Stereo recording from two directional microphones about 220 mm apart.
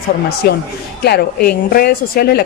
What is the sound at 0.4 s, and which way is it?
A woman's voice, 45° left (ahead or behind).